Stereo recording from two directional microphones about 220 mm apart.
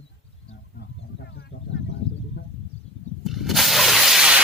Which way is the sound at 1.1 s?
50° left (ahead or behind).